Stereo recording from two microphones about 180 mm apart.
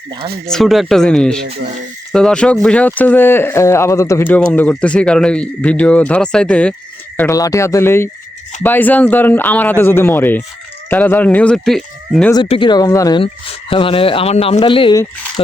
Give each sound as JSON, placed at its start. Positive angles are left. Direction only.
{"t": 0.4, "sound": "speech", "side_deg": 0}
{"t": 7.2, "sound": "speech", "side_deg": 20}
{"t": 12.3, "sound": "speech", "side_deg": 25}